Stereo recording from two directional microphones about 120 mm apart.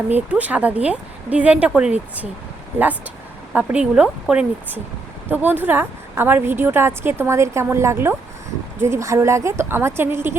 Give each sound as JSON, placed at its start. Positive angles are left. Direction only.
{"t": 0.1, "sound": "speech", "side_deg": -10}
{"t": 3.5, "sound": "a woman's voice", "side_deg": -10}